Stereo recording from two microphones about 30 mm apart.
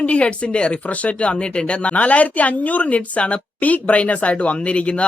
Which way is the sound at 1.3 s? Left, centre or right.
Left.